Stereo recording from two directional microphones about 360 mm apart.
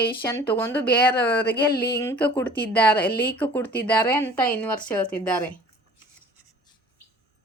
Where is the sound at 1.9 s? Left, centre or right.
Centre.